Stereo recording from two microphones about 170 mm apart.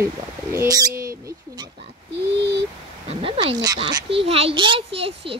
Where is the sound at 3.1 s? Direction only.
35° right (ahead or behind).